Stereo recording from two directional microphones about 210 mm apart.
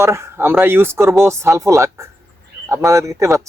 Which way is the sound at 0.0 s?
10° right (ahead or behind).